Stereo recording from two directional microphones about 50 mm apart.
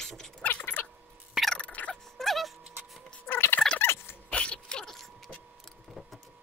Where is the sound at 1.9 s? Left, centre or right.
Centre.